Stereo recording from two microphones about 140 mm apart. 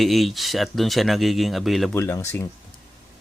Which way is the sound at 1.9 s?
20° left (ahead or behind).